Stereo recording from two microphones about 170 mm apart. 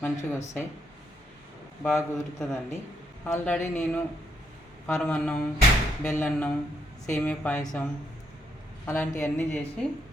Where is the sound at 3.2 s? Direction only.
10° left (ahead or behind).